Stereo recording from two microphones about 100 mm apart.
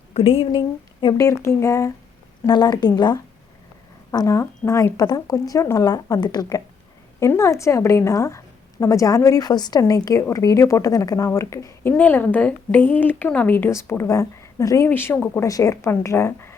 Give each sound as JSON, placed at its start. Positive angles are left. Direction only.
{"t": 0.1, "sound": "speech", "side_deg": 70}
{"t": 1.1, "sound": "speech", "side_deg": 30}
{"t": 2.5, "sound": "a woman's voice", "side_deg": 45}
{"t": 4.4, "sound": "a woman's voice", "side_deg": 30}
{"t": 7.2, "sound": "a woman's voice", "side_deg": 30}
{"t": 14.8, "sound": "speech", "side_deg": 20}